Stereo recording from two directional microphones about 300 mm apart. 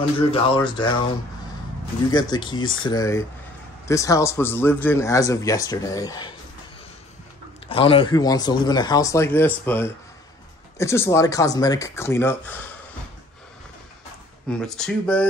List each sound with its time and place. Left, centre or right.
0.3 s a man's voice: centre
2.0 s a man's voice: centre
7.6 s a man's voice: centre
14.5 s speech: centre